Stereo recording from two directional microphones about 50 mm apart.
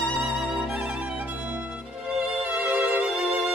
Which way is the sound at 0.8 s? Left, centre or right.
Right.